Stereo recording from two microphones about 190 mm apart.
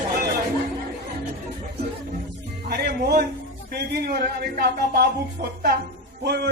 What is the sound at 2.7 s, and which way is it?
Speech, 55° right (ahead or behind).